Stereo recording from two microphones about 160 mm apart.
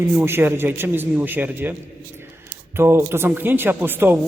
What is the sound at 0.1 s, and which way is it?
A man's voice, 15° right (ahead or behind).